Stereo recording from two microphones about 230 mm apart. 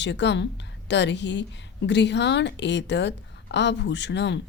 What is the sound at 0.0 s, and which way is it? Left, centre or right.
A woman's voice, left.